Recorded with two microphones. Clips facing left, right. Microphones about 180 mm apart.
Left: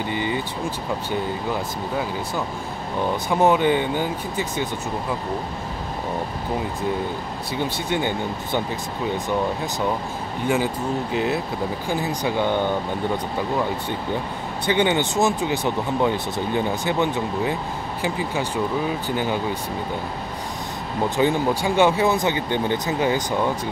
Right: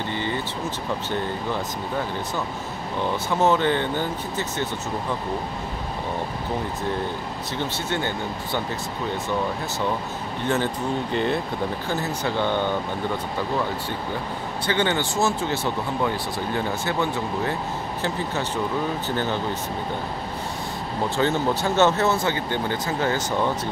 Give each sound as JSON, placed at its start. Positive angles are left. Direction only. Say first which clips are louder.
{"t": 0.1, "sound": "speech", "louder": "left 3 dB", "side_deg": 15}
{"t": 3.3, "sound": "speech", "louder": "left 3 dB", "side_deg": 15}
{"t": 7.5, "sound": "speech", "louder": "left 3 dB", "side_deg": 15}
{"t": 10.4, "sound": "speech", "louder": "left 2 dB", "side_deg": 10}
{"t": 14.7, "sound": "speech", "louder": "left 3 dB", "side_deg": 15}
{"t": 21.2, "sound": "speech", "louder": "left 2 dB", "side_deg": 15}